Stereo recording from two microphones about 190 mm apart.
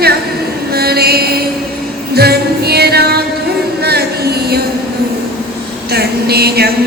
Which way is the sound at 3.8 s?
55° right (ahead or behind).